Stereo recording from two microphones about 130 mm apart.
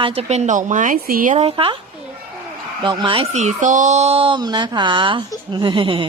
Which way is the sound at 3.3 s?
60° right (ahead or behind).